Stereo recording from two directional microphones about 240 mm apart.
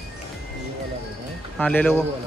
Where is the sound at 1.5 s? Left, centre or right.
Centre.